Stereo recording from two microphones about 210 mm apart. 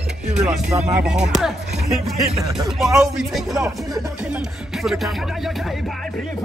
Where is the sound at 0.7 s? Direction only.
35° right (ahead or behind).